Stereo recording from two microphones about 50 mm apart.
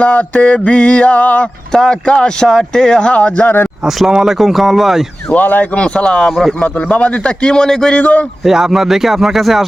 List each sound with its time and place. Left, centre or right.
0.0 s mantra: left
1.7 s speech: centre
2.7 s mantra: centre
3.8 s speech: centre
5.3 s speech: left
5.8 s mantra: left
6.6 s mantra: left
7.9 s speech: left
8.4 s speech: centre